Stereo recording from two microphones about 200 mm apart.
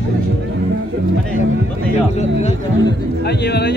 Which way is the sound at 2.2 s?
35° left (ahead or behind).